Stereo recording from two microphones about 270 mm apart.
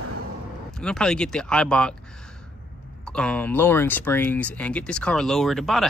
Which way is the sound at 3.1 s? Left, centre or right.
Centre.